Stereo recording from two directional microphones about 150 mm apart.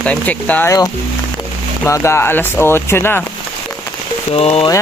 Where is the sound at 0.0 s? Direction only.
10° left (ahead or behind).